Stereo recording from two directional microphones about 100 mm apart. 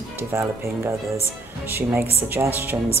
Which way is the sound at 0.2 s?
25° right (ahead or behind).